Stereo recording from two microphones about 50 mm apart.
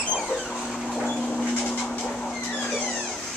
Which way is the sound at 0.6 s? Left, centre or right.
Centre.